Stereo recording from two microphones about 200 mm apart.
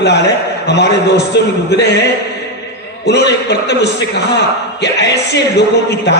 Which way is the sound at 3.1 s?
55° left (ahead or behind).